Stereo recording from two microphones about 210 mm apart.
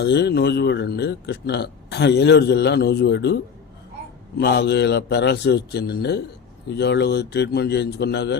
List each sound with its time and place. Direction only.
0.0 s a man's voice: 55° left (ahead or behind)
4.4 s a man's voice: 50° left (ahead or behind)